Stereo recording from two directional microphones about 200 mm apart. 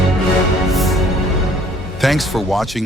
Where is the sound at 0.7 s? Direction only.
Centre (ahead or behind).